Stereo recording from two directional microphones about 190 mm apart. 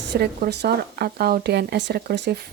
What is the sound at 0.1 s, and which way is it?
A woman's voice, 60° right (ahead or behind).